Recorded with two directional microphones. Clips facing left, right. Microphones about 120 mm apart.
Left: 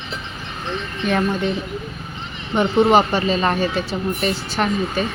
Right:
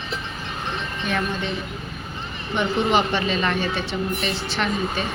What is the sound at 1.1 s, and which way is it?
Speech, 40° left (ahead or behind).